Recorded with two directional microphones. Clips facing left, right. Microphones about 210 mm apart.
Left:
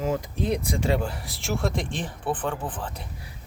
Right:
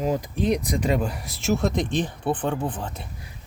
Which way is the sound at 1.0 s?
20° right (ahead or behind).